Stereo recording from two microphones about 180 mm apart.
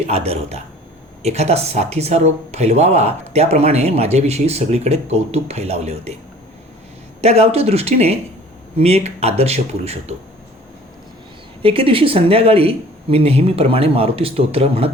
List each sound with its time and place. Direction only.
0.1 s speech: 35° right (ahead or behind)
7.2 s speech: 35° right (ahead or behind)
11.6 s speech: 30° right (ahead or behind)